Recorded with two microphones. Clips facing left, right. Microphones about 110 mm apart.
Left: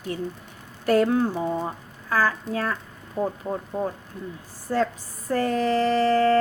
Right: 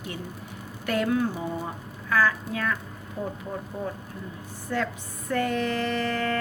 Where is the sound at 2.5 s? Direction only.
35° left (ahead or behind).